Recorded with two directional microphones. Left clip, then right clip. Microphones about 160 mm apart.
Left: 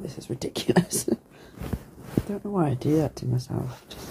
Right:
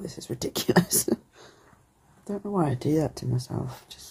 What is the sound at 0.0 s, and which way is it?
Speech, 15° right (ahead or behind).